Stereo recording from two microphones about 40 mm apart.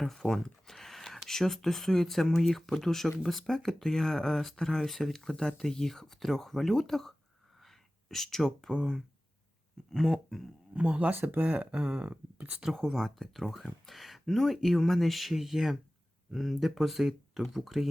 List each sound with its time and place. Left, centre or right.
0.0 s a sound: centre
1.3 s speech: centre
5.3 s speech: centre
7.6 s a sound: centre
8.8 s speech: centre
10.8 s speech: right
11.1 s speech: right
11.4 s speech: right
11.7 s a sound: centre
12.9 s speech: centre